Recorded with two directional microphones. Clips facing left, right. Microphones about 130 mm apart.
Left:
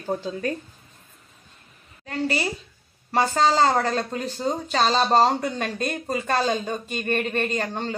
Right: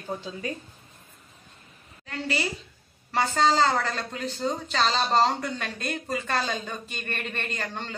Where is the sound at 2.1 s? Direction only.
40° left (ahead or behind).